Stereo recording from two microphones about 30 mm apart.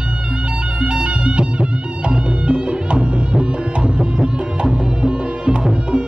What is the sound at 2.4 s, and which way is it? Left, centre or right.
Music, right.